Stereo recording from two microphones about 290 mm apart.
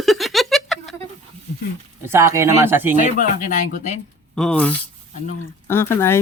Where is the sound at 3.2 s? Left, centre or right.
Left.